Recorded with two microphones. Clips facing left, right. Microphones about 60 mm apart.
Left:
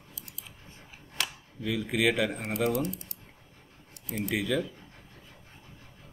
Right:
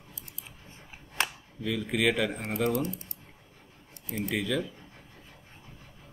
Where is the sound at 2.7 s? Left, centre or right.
Right.